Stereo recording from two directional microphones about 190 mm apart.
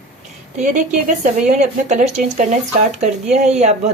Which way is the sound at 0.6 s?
40° right (ahead or behind).